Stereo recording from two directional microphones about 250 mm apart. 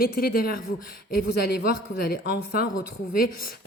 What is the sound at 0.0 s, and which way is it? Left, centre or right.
Speech, left.